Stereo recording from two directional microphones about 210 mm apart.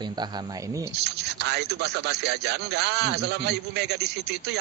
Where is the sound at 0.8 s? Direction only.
50° right (ahead or behind).